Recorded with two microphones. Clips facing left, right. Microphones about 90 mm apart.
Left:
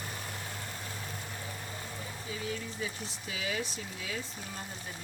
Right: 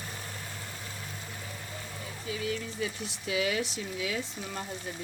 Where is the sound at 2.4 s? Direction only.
70° right (ahead or behind); by 4.1 s 90° right.